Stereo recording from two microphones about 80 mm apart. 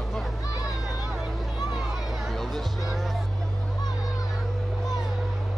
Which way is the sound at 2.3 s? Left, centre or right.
Centre.